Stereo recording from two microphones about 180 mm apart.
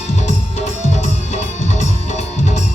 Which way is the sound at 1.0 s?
40° left (ahead or behind).